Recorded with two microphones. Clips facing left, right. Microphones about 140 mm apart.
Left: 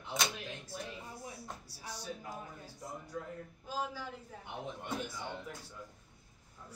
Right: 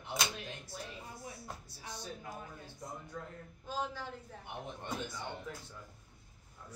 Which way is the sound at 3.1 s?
5° left (ahead or behind).